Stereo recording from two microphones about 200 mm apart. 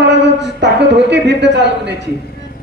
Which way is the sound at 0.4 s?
60° right (ahead or behind).